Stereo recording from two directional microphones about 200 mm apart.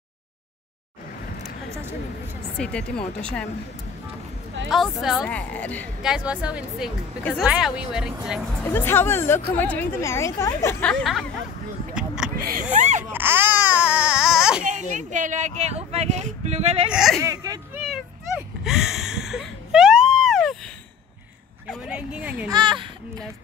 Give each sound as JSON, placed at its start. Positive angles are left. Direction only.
{"t": 2.5, "sound": "speech", "side_deg": 5}
{"t": 4.6, "sound": "speech", "side_deg": 0}
{"t": 6.0, "sound": "speech", "side_deg": -5}
{"t": 8.7, "sound": "speech", "side_deg": 10}
{"t": 11.9, "sound": "a sound", "side_deg": -5}
{"t": 12.4, "sound": "a sound", "side_deg": -50}
{"t": 12.7, "sound": "baby cry", "side_deg": -35}
{"t": 13.1, "sound": "baby cry", "side_deg": -10}
{"t": 14.7, "sound": "speech", "side_deg": -40}
{"t": 16.9, "sound": "speech", "side_deg": 0}
{"t": 17.2, "sound": "speech", "side_deg": -15}
{"t": 18.6, "sound": "a sound", "side_deg": 0}
{"t": 21.6, "sound": "speech", "side_deg": -5}
{"t": 22.5, "sound": "speech", "side_deg": -20}